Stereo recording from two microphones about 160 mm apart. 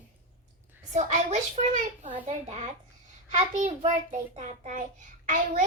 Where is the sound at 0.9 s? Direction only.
45° right (ahead or behind).